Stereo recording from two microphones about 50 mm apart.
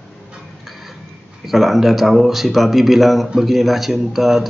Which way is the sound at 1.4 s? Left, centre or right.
Centre.